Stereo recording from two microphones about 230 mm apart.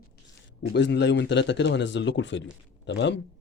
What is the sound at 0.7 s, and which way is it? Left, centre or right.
Speech, left.